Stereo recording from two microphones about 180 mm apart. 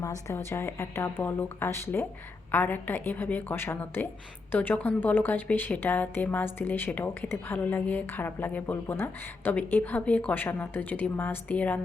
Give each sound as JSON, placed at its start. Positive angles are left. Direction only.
{"t": 0.0, "sound": "a woman's voice", "side_deg": 15}